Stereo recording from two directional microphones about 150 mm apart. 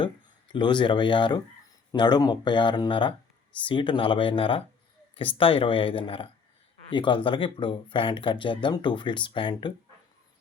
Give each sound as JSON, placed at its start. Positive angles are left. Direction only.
{"t": 0.0, "sound": "speech", "side_deg": 30}